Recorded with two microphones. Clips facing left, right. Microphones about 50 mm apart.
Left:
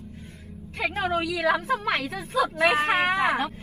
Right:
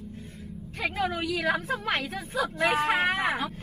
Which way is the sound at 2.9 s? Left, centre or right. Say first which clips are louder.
Left 3 dB; left.